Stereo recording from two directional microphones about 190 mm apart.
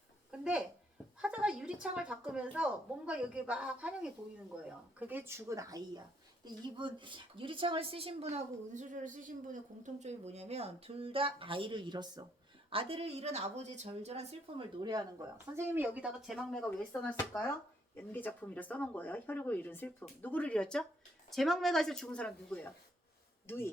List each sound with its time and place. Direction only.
0.3 s a sound: 5° right (ahead or behind)
1.2 s a woman's voice: 5° right (ahead or behind); by 14.3 s 35° right (ahead or behind)
14.8 s speech: 15° right (ahead or behind); by 23.6 s 15° left (ahead or behind)